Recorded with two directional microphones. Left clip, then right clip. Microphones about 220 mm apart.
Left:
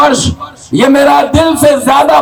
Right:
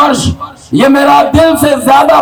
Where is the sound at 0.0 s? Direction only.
25° left (ahead or behind).